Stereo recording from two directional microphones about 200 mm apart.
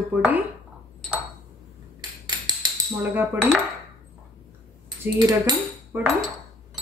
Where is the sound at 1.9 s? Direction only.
20° right (ahead or behind).